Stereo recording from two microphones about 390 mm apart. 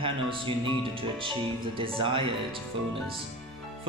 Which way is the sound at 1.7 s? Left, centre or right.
Centre.